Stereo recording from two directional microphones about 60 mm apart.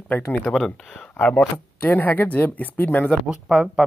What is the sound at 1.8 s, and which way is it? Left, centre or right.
Speech, left.